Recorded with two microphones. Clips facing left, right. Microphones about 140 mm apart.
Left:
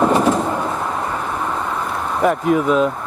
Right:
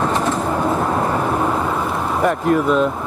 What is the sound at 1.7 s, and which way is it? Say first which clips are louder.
Vehicle: right 2 dB; 5° right (ahead or behind).